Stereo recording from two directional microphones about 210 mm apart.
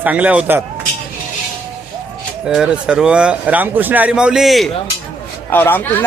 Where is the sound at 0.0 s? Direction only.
5° right (ahead or behind).